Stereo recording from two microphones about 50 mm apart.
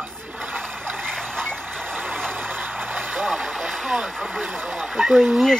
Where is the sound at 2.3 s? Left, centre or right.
Right.